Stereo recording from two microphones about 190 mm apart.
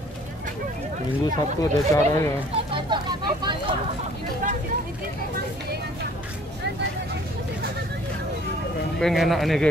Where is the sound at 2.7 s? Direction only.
25° right (ahead or behind).